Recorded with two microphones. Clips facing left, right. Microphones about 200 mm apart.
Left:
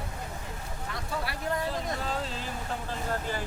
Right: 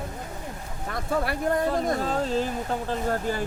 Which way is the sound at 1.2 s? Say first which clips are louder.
Right 6 dB; 50° right (ahead or behind).